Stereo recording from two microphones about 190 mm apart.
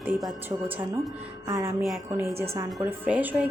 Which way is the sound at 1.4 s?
15° right (ahead or behind).